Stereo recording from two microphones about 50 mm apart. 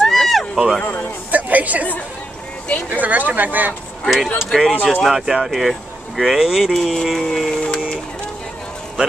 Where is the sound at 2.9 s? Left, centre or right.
Right.